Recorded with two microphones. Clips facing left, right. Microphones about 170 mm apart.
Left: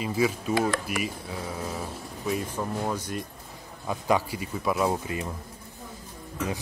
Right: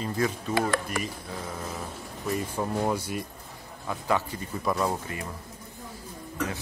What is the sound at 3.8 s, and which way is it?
A man's voice, 15° left (ahead or behind).